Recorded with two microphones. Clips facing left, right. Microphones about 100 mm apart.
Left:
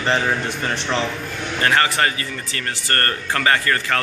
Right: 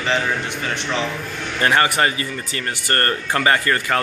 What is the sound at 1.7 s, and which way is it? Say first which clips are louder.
Speech: right 1 dB; 20° right (ahead or behind).